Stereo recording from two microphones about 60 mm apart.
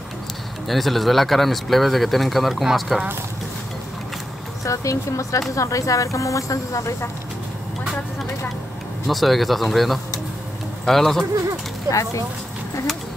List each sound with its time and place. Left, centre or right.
0.7 s speech: centre
4.6 s speech: left
9.0 s speech: centre
11.9 s speech: left